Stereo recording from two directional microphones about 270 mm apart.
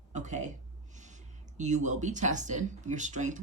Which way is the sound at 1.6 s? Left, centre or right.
Right.